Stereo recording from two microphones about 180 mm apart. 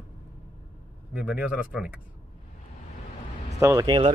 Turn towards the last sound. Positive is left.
turn(degrees=-25)  # may be behind; listen again after turning